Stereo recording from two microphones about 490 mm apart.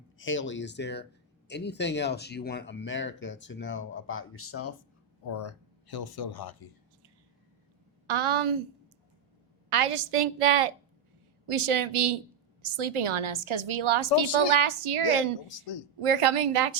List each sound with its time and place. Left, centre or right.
0.2 s speech: left
5.3 s speech: left
8.1 s a woman's voice: right
9.6 s a woman's voice: right
12.6 s a woman's voice: right